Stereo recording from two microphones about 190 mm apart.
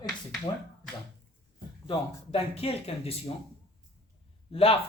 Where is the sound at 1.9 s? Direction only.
30° left (ahead or behind).